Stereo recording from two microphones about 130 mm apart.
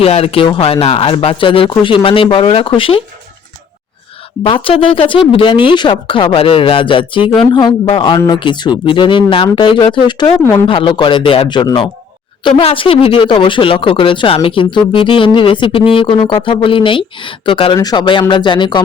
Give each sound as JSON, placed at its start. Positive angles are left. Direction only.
{"t": 0.0, "sound": "speech", "side_deg": 50}
{"t": 4.4, "sound": "speech", "side_deg": 45}